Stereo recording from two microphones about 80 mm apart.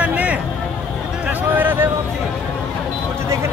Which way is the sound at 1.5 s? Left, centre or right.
Right.